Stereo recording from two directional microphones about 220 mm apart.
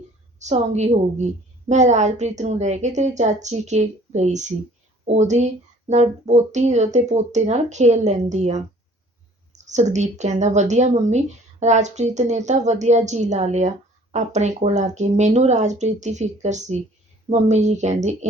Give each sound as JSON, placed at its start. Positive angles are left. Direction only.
{"t": 0.3, "sound": "a woman's voice", "side_deg": -30}